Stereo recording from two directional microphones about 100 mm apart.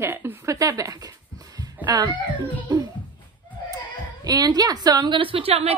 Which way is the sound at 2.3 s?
45° right (ahead or behind).